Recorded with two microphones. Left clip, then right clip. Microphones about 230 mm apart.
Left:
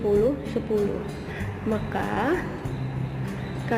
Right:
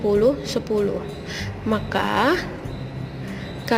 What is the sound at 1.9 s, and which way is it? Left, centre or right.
Speech, right.